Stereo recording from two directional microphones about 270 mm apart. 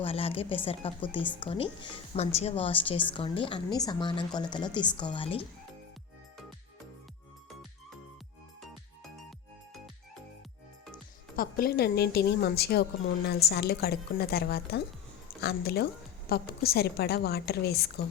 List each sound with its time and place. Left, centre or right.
0.0 s a woman's voice: left
11.3 s a woman's voice: left